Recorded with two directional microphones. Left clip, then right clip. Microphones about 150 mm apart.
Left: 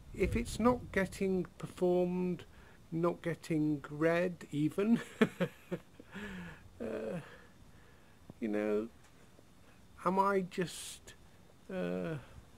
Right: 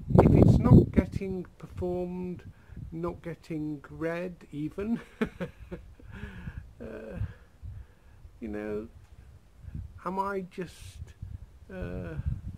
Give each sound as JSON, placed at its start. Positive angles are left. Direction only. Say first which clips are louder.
{"t": 0.3, "sound": "speech", "louder": "right 8 dB", "side_deg": -5}
{"t": 8.4, "sound": "speech", "louder": "left 1 dB", "side_deg": 0}
{"t": 9.9, "sound": "speech", "louder": "left 1 dB", "side_deg": 0}